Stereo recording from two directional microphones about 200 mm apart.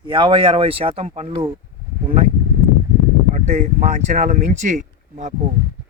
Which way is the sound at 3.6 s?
35° right (ahead or behind).